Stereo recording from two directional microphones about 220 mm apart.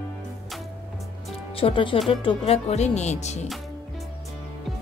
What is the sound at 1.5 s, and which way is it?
Speech, 25° left (ahead or behind).